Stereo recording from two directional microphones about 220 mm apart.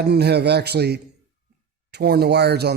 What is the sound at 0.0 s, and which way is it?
Speech, 50° right (ahead or behind).